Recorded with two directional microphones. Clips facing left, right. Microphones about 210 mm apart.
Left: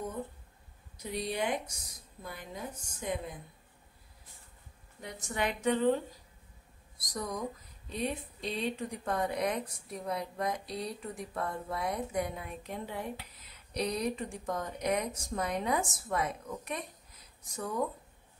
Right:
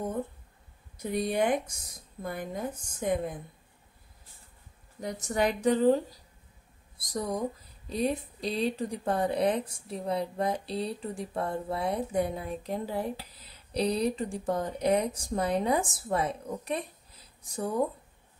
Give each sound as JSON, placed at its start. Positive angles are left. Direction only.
{"t": 0.9, "sound": "a woman's voice", "side_deg": -50}
{"t": 5.0, "sound": "speech", "side_deg": -40}